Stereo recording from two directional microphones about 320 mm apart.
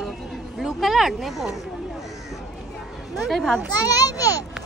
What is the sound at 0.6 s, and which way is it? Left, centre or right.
Speech, centre.